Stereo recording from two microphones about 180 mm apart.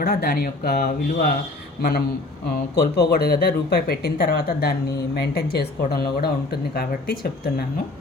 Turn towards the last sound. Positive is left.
turn(degrees=60)  # may be behind; listen again after turning